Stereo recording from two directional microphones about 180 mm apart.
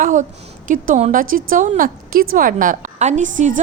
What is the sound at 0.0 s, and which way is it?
A woman's voice, 45° right (ahead or behind).